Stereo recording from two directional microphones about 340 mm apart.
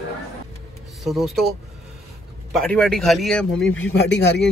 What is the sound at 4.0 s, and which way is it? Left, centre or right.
Speech, left.